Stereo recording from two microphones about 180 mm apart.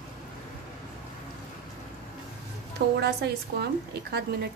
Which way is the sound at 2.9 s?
65° right (ahead or behind).